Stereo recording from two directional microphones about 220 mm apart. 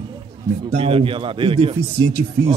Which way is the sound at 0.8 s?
25° right (ahead or behind).